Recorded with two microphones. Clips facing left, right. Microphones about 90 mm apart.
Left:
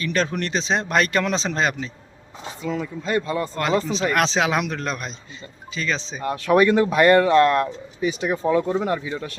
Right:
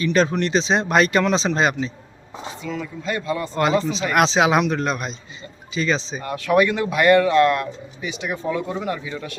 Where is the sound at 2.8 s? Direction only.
30° left (ahead or behind).